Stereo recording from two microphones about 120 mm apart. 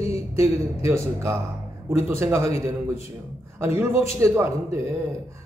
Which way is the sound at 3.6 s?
20° right (ahead or behind).